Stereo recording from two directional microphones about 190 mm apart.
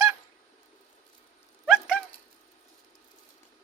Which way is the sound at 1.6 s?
Centre (ahead or behind).